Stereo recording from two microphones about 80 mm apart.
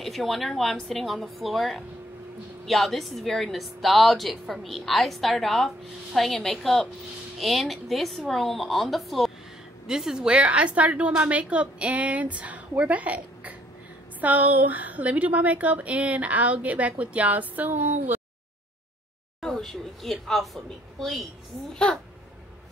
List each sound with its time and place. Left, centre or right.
0.0 s a woman's voice: centre; by 18.2 s right
19.4 s a woman's voice: centre